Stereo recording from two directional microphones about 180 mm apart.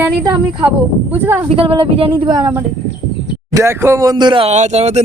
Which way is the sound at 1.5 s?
30° right (ahead or behind).